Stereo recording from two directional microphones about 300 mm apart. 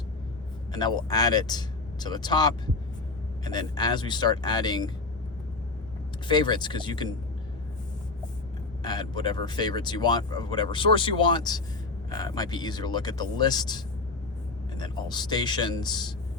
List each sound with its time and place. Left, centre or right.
0.7 s speech: centre
6.2 s speech: centre
8.8 s speech: centre